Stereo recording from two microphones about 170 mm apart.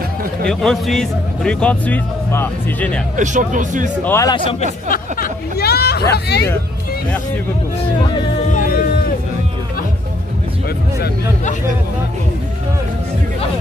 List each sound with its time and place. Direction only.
0.5 s a man's voice: centre (ahead or behind)
3.2 s speech: 50° right (ahead or behind)
4.0 s a man's voice: 15° left (ahead or behind)
4.8 s speech: 55° left (ahead or behind); by 6.5 s 75° left (ahead or behind)
8.5 s a sound: 55° left (ahead or behind)